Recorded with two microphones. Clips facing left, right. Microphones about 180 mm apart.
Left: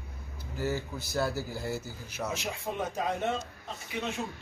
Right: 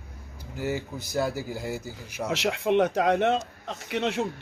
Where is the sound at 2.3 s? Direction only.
80° right.